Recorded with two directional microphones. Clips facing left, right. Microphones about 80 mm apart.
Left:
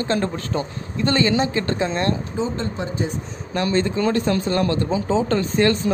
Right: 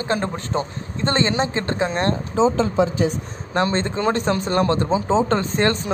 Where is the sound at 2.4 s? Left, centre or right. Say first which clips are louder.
Right 8 dB; right.